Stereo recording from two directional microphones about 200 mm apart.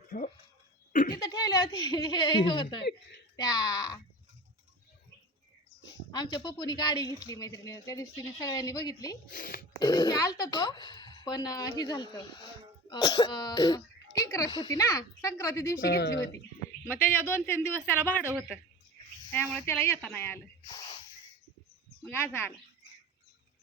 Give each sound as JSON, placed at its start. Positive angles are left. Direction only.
{"t": 0.1, "sound": "speech", "side_deg": 40}
{"t": 1.1, "sound": "a woman's voice", "side_deg": 20}
{"t": 6.1, "sound": "a woman's voice", "side_deg": 20}
{"t": 9.3, "sound": "speech", "side_deg": 45}
{"t": 9.7, "sound": "a woman's voice", "side_deg": 20}
{"t": 15.9, "sound": "speech", "side_deg": 55}
{"t": 16.9, "sound": "speech", "side_deg": 10}
{"t": 19.3, "sound": "speech", "side_deg": 10}
{"t": 20.7, "sound": "snort", "side_deg": 20}
{"t": 22.0, "sound": "speech", "side_deg": 10}